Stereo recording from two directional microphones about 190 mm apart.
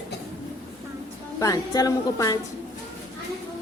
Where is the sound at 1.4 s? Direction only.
20° left (ahead or behind).